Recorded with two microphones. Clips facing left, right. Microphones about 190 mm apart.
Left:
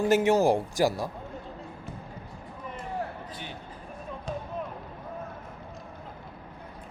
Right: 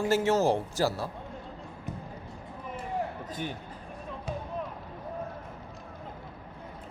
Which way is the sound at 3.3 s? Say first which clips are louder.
Right 5 dB; 45° right (ahead or behind).